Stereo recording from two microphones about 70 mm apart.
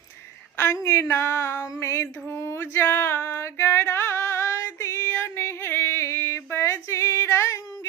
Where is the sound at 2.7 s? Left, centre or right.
Left.